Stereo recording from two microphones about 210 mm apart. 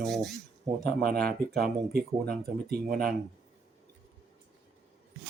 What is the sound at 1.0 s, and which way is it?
Speech, 45° right (ahead or behind).